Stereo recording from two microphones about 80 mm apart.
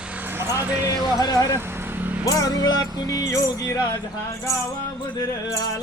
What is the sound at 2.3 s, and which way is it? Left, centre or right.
Music, left.